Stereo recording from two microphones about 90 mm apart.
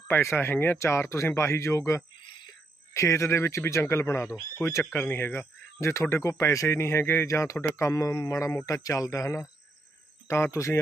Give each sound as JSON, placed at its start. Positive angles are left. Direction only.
{"t": 0.1, "sound": "speech", "side_deg": 25}